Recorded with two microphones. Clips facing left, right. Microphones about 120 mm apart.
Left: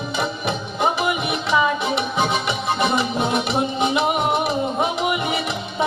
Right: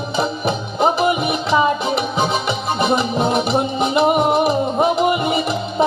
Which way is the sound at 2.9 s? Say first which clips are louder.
Right 4 dB; 35° right (ahead or behind).